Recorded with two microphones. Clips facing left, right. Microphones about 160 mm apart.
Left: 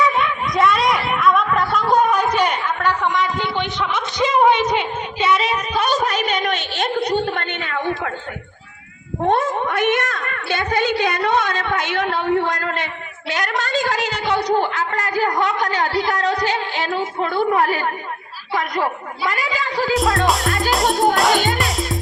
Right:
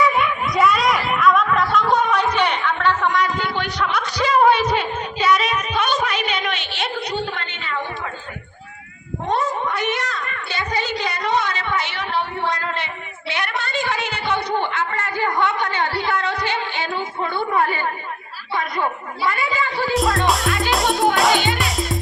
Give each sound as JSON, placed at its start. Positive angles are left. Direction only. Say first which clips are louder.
{"t": 0.2, "sound": "a sound", "louder": "even", "side_deg": 0}
{"t": 9.2, "sound": "a woman's voice", "louder": "left 4 dB", "side_deg": 55}
{"t": 16.1, "sound": "music", "louder": "left 3 dB", "side_deg": 40}
{"t": 17.2, "sound": "a woman's voice", "louder": "left 3 dB", "side_deg": 90}
{"t": 19.9, "sound": "speech", "louder": "left 2 dB", "side_deg": 0}